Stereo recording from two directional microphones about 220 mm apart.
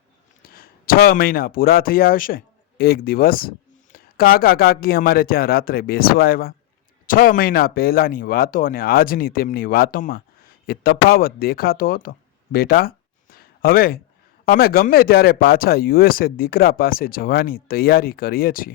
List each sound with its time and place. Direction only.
0.4 s speech: 40° left (ahead or behind)
13.3 s a sound: 40° left (ahead or behind)
14.5 s speech: 40° left (ahead or behind)